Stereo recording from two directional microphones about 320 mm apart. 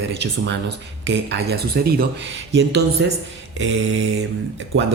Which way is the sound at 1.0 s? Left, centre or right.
Right.